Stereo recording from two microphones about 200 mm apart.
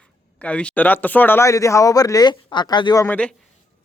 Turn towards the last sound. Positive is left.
turn(degrees=5)  # may be behind; listen again after turning